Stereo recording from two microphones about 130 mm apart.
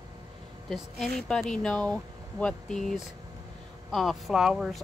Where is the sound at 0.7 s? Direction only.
5° left (ahead or behind).